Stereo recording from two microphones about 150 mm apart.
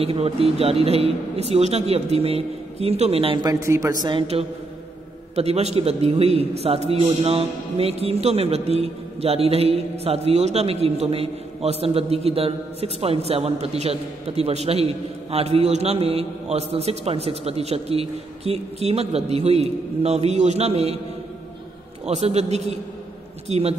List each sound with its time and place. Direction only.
0.0 s a man's voice: 40° right (ahead or behind)
3.4 s speech: 20° right (ahead or behind)
4.3 s a man's voice: 40° right (ahead or behind)
22.0 s a man's voice: 45° right (ahead or behind)